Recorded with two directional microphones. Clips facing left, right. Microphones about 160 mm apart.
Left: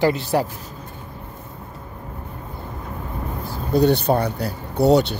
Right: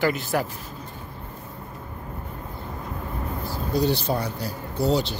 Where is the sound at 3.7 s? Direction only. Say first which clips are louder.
Left 7 dB; 60° left (ahead or behind).